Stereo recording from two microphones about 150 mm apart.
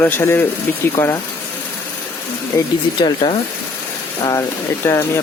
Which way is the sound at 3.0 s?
35° left (ahead or behind).